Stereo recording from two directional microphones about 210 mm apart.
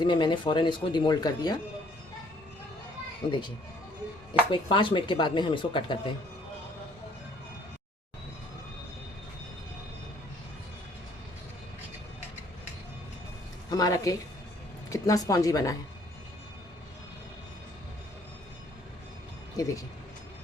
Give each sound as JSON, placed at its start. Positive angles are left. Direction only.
{"t": 0.0, "sound": "speech", "side_deg": 20}
{"t": 3.2, "sound": "speech", "side_deg": 25}
{"t": 4.5, "sound": "speech", "side_deg": 25}
{"t": 13.7, "sound": "a woman's voice", "side_deg": 20}
{"t": 19.5, "sound": "speech", "side_deg": 15}